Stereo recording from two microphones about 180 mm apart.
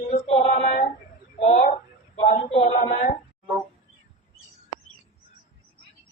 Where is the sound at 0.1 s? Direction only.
35° left (ahead or behind).